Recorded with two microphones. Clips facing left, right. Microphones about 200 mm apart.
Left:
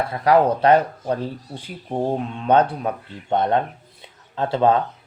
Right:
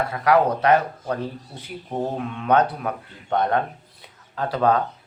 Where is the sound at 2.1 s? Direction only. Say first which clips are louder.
Left 2 dB; 30° left (ahead or behind).